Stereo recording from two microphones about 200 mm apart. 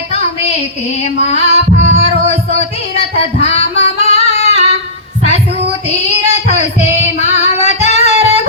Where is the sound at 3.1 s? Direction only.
30° left (ahead or behind).